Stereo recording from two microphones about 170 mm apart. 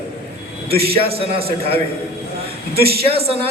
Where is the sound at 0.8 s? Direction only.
35° right (ahead or behind).